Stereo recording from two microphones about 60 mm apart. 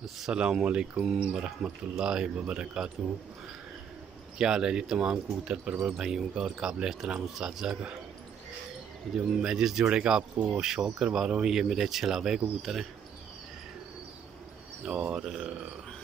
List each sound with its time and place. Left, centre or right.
0.3 s speech: centre
4.4 s speech: centre
9.1 s speech: centre
14.9 s speech: centre